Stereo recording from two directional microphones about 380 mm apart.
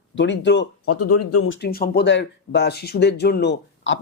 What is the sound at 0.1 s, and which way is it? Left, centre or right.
Speech, left.